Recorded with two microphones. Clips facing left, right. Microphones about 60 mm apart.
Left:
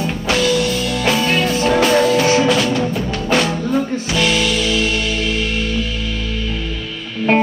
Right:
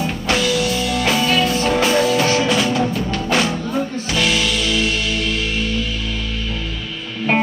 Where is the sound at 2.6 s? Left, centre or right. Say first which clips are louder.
Even; centre.